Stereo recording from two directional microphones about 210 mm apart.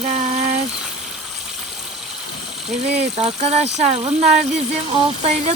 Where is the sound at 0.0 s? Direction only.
30° right (ahead or behind).